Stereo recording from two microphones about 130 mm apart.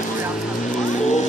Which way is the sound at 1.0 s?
65° left (ahead or behind).